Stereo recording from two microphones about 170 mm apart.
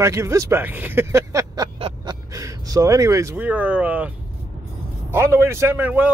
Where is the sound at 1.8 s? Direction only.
35° right (ahead or behind).